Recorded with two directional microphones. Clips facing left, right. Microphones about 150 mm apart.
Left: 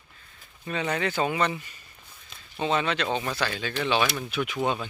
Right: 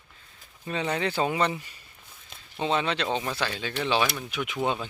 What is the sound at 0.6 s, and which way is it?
Speech, 25° right (ahead or behind).